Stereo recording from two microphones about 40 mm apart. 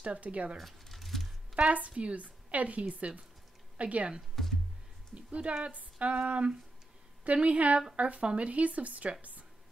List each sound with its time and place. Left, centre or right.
0.0 s speech: right
0.6 s a sound: centre
1.5 s a woman's voice: right
4.4 s music: centre
5.1 s speech: right